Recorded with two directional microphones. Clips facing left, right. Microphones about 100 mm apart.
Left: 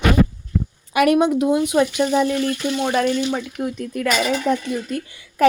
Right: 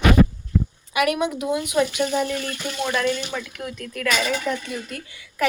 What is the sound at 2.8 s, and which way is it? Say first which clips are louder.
Speech: left 3 dB; 30° left (ahead or behind).